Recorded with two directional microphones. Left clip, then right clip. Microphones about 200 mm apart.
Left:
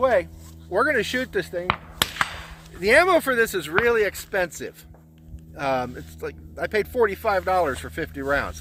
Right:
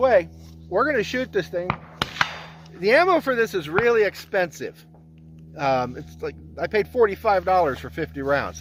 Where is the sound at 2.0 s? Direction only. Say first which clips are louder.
Left 3 dB; 60° left (ahead or behind).